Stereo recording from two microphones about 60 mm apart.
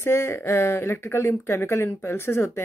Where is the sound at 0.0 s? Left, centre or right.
Left.